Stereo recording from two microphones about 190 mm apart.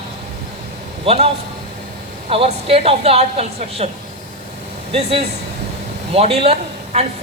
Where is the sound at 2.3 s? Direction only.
30° right (ahead or behind).